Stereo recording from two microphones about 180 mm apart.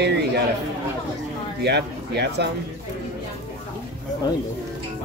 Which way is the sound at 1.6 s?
70° right (ahead or behind).